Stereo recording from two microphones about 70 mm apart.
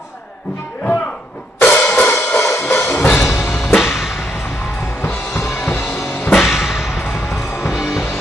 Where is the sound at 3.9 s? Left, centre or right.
Centre.